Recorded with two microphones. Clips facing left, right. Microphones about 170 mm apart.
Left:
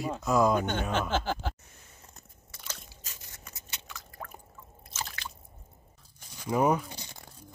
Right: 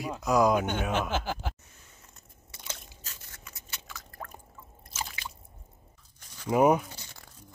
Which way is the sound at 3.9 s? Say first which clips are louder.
Even; centre (ahead or behind).